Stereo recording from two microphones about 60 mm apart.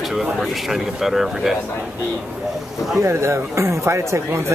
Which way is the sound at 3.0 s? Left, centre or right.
Right.